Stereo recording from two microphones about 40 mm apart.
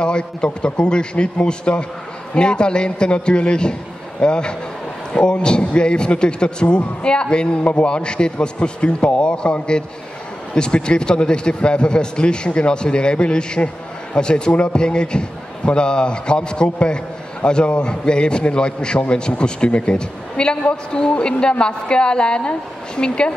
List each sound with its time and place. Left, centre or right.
0.0 s a man's voice: left